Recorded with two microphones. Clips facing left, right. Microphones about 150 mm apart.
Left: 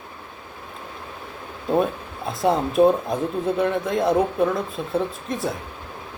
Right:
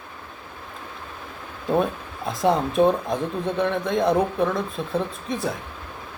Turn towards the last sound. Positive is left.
turn(degrees=0)  # may be behind; listen again after turning